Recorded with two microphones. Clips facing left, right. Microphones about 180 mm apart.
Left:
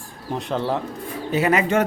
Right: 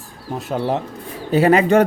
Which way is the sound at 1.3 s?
35° right (ahead or behind).